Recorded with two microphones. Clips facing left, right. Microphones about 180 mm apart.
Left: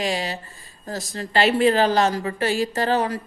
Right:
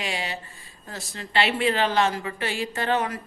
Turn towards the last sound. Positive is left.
turn(degrees=35)  # may be behind; listen again after turning